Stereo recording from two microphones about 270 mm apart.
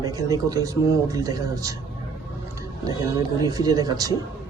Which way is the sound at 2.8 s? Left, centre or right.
Centre.